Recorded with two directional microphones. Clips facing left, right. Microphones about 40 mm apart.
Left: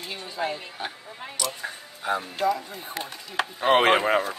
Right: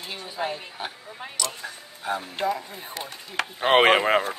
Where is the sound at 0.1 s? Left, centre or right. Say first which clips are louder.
Even; centre.